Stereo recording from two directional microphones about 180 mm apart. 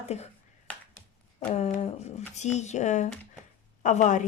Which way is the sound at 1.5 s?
35° left (ahead or behind).